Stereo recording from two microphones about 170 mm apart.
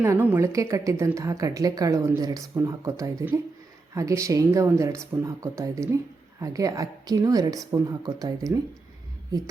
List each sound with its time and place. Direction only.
0.0 s a woman's voice: 15° right (ahead or behind)